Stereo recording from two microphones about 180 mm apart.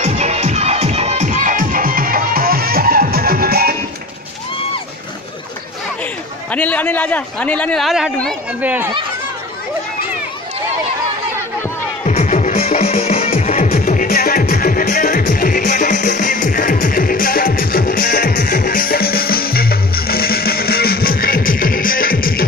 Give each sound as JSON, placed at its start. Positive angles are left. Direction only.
{"t": 0.0, "sound": "music", "side_deg": -40}
{"t": 6.5, "sound": "a man's voice", "side_deg": 10}
{"t": 12.1, "sound": "music", "side_deg": 40}